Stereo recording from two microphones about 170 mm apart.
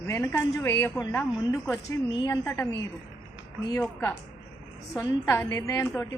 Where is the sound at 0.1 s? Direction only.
15° left (ahead or behind).